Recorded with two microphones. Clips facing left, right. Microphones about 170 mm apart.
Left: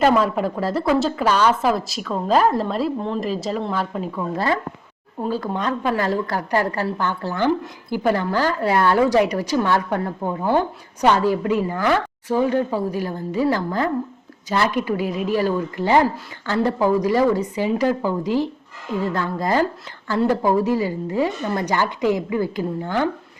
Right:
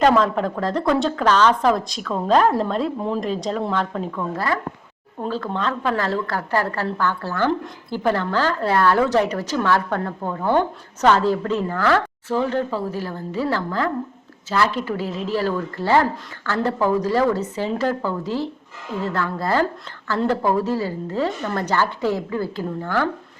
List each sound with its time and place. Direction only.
0.0 s a woman's voice: 5° left (ahead or behind)
4.4 s speech: 25° left (ahead or behind)
5.3 s a woman's voice: 15° left (ahead or behind)